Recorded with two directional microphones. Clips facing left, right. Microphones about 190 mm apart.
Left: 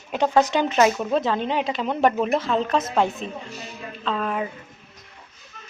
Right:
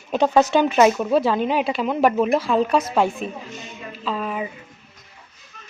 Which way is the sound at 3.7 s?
5° right (ahead or behind).